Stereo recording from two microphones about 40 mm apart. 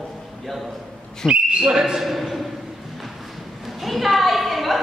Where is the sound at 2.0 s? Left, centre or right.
Centre.